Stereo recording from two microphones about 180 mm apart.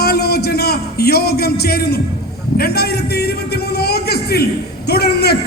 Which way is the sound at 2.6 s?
60° left (ahead or behind).